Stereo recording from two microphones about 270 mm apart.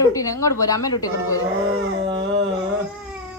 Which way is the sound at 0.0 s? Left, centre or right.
Centre.